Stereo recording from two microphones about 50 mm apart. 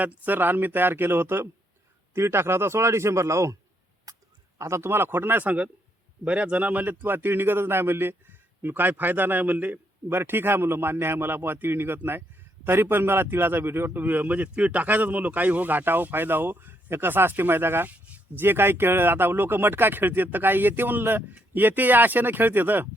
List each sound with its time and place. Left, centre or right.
0.0 s a man's voice: right
2.1 s a man's voice: right
4.5 s speech: right
4.9 s a man's voice: right
5.4 s a man's voice: right
6.8 s a man's voice: right
10.1 s a man's voice: right
17.9 s a sound: right
18.3 s a man's voice: right